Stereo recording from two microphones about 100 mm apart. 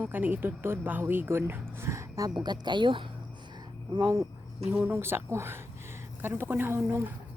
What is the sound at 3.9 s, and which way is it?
Speech, 25° right (ahead or behind).